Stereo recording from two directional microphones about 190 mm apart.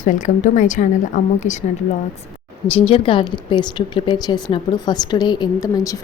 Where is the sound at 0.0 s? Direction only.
40° left (ahead or behind).